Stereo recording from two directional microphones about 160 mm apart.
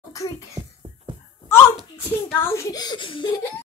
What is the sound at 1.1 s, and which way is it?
Wail, 30° right (ahead or behind).